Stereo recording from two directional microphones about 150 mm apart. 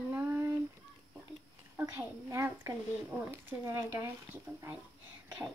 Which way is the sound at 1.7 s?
15° right (ahead or behind).